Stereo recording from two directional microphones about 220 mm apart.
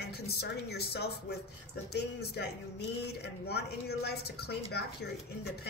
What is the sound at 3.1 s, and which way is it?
A woman's voice, 50° left (ahead or behind).